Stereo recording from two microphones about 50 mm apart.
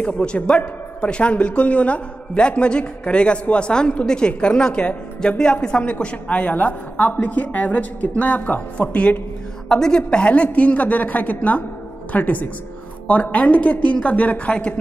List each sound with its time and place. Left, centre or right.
0.0 s a man's voice: left
9.7 s a woman's voice: centre